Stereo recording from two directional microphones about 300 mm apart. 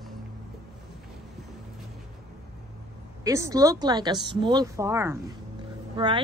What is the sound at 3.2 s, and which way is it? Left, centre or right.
A woman's voice, centre.